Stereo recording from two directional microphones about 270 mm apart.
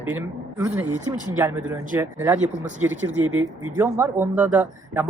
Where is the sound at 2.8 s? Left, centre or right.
Right.